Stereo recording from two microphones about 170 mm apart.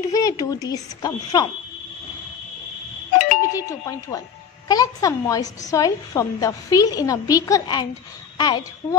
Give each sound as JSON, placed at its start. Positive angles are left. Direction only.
{"t": 0.1, "sound": "a woman's voice", "side_deg": 20}
{"t": 3.2, "sound": "doorbell", "side_deg": 50}
{"t": 3.5, "sound": "a woman's voice", "side_deg": 20}